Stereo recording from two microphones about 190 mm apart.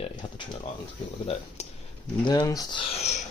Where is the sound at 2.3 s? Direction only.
20° left (ahead or behind).